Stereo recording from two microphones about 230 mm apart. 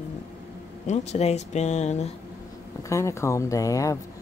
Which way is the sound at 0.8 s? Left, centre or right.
Left.